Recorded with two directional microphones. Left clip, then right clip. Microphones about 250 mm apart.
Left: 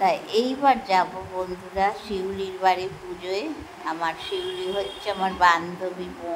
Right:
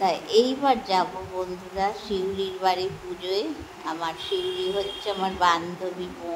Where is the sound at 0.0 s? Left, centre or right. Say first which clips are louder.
Right 1 dB; centre.